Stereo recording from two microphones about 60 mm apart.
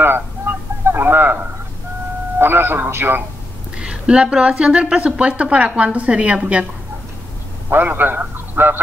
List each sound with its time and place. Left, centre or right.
0.0 s a sound: right
2.3 s speech: right
3.7 s a woman's voice: centre
7.7 s a man's voice: right